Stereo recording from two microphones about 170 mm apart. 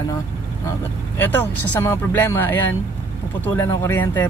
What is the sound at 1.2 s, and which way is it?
Speech, 10° left (ahead or behind).